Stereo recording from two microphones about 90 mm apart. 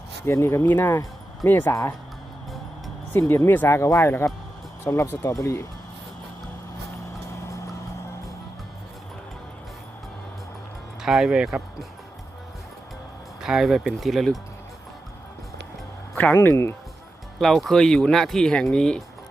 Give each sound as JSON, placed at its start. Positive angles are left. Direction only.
{"t": 0.3, "sound": "speech", "side_deg": 30}
{"t": 1.7, "sound": "speech", "side_deg": 35}
{"t": 3.1, "sound": "speech", "side_deg": 25}
{"t": 5.2, "sound": "speech", "side_deg": 40}
{"t": 11.0, "sound": "speech", "side_deg": -5}
{"t": 13.4, "sound": "speech", "side_deg": -5}
{"t": 16.3, "sound": "speech", "side_deg": 25}
{"t": 17.4, "sound": "speech", "side_deg": 5}